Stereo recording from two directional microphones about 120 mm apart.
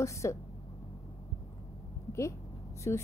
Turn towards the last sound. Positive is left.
turn(degrees=20)  # may be behind; listen again after turning